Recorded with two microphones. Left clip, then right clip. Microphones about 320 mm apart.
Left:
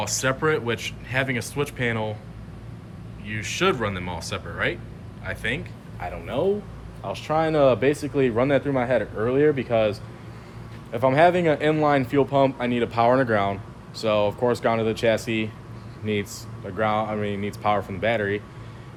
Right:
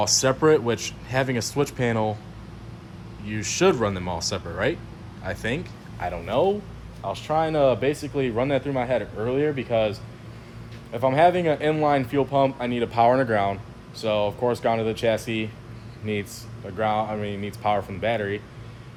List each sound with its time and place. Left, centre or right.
0.0 s speech: centre
3.2 s speech: centre
6.0 s speech: right
7.0 s speech: centre